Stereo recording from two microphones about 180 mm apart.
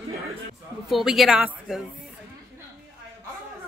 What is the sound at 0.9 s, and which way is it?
Speech, centre (ahead or behind).